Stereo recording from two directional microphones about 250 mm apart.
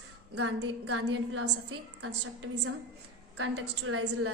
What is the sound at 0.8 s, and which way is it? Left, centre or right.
Speech, right.